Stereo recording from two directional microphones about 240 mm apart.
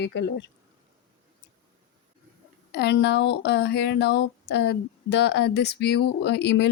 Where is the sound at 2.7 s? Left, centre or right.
Left.